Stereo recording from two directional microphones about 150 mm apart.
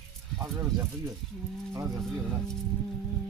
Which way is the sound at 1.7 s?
20° right (ahead or behind).